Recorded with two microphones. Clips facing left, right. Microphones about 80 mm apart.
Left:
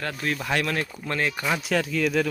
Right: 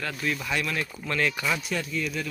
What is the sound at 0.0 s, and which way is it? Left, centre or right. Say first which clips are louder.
Speech: left 1 dB; left.